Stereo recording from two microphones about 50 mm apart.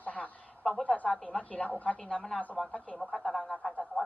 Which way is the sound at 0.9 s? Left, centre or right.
Left.